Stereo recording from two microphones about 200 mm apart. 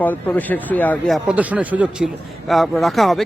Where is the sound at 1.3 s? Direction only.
5° right (ahead or behind).